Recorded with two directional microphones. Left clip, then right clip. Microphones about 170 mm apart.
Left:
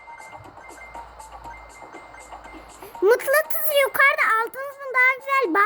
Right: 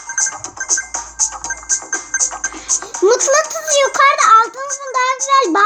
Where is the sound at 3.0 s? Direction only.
55° left (ahead or behind).